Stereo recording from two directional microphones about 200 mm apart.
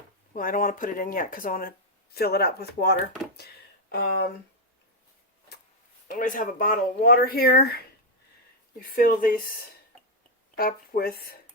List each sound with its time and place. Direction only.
0.3 s speech: 45° left (ahead or behind)
6.1 s speech: 40° left (ahead or behind)
10.6 s speech: 45° left (ahead or behind)